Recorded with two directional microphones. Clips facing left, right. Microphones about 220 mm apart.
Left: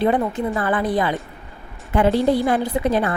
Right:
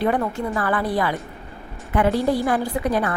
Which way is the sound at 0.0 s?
20° left (ahead or behind).